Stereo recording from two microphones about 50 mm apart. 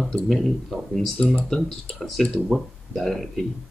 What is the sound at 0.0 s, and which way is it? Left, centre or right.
Speech, centre.